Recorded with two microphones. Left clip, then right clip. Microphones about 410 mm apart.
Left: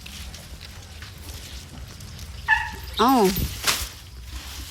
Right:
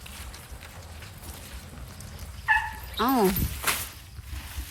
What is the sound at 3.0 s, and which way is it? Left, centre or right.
Speech, centre.